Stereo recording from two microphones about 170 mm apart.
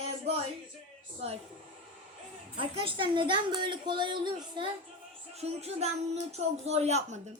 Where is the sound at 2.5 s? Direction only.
35° right (ahead or behind).